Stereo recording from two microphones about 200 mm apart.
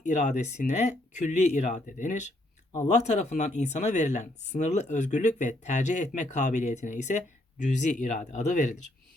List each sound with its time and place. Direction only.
0.0 s speech: 35° left (ahead or behind)